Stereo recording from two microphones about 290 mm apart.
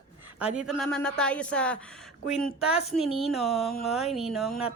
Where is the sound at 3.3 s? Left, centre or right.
Centre.